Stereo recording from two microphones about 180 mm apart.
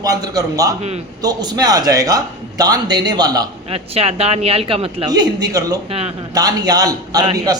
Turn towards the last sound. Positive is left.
turn(degrees=-20)  # may be behind; listen again after turning